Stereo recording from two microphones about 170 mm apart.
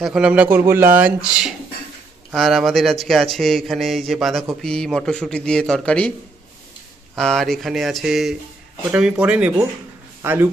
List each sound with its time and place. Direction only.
0.0 s speech: 5° right (ahead or behind)
7.2 s speech: 5° left (ahead or behind); by 10.5 s 15° right (ahead or behind)